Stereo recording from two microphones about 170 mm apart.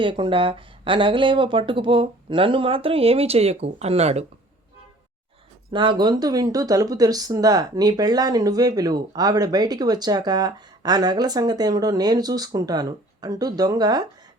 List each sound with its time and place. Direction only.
0.0 s speech: 30° right (ahead or behind)
5.7 s speech: 30° right (ahead or behind)